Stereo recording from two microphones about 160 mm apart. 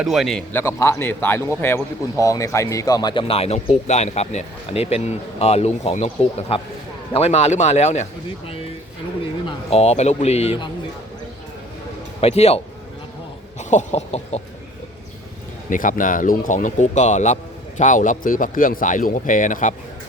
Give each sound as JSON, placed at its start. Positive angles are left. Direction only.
{"t": 0.0, "sound": "a man's voice", "side_deg": 0}
{"t": 0.5, "sound": "speech", "side_deg": 15}
{"t": 9.5, "sound": "speech", "side_deg": 40}
{"t": 12.2, "sound": "speech", "side_deg": 40}
{"t": 15.7, "sound": "speech", "side_deg": 55}